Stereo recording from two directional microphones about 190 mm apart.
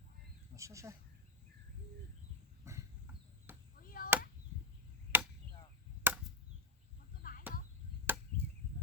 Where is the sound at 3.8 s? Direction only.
50° left (ahead or behind).